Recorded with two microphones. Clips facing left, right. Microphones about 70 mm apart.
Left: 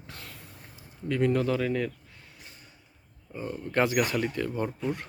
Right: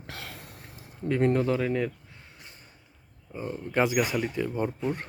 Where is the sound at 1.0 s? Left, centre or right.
Right; by 4.9 s centre.